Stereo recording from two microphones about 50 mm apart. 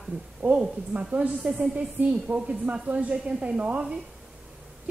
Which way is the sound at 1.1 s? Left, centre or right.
Right.